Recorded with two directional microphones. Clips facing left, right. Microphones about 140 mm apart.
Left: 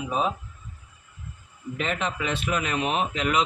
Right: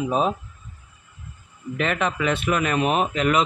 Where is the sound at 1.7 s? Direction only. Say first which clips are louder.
Right 5 dB; 70° right (ahead or behind); by 3.4 s 50° right (ahead or behind).